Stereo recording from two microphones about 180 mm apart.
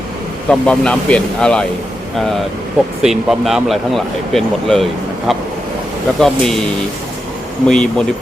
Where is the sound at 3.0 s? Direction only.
Centre (ahead or behind).